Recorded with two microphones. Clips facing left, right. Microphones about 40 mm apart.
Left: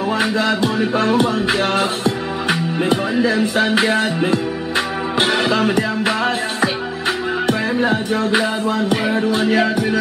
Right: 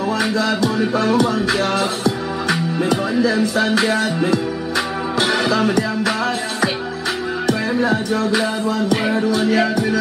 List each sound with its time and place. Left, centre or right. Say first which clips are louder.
0.2 s music: left 1 dB; left
7.8 s music: even; left